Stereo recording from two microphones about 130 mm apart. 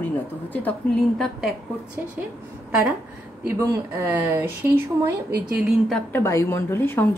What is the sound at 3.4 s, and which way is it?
Speech, 20° right (ahead or behind).